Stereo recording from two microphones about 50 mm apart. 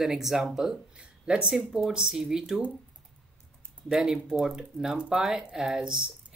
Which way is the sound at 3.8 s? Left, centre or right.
Centre.